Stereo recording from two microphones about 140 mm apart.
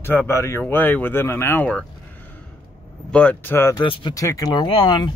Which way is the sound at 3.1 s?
10° left (ahead or behind).